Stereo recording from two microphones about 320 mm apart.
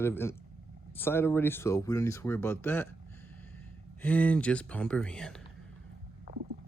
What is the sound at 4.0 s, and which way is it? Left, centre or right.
Speech, centre.